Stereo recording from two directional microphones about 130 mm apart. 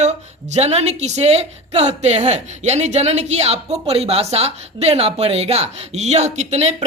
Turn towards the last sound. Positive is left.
turn(degrees=-60)  # may be behind; listen again after turning